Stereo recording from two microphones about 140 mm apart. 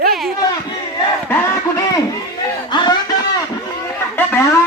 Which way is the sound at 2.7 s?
30° left (ahead or behind).